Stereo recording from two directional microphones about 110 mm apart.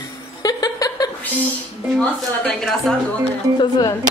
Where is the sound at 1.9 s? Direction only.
10° left (ahead or behind).